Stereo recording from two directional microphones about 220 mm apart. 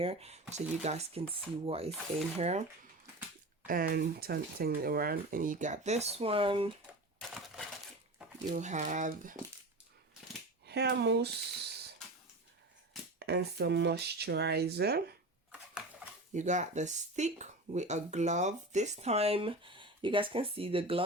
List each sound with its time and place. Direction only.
0.0 s speech: 25° right (ahead or behind)
3.7 s speech: 40° right (ahead or behind); by 6.7 s 25° right (ahead or behind)
7.2 s typewriter: centre (ahead or behind)
8.4 s speech: 35° right (ahead or behind)
10.7 s speech: 50° right (ahead or behind)
13.1 s speech: 50° right (ahead or behind)
16.3 s speech: 35° right (ahead or behind)